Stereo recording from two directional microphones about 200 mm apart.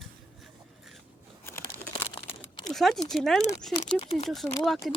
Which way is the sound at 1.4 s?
15° left (ahead or behind).